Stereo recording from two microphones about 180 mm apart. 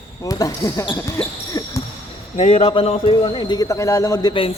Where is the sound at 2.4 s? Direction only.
40° left (ahead or behind).